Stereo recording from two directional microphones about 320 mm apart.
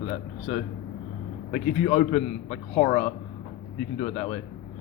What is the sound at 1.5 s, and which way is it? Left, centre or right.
A man's voice, left.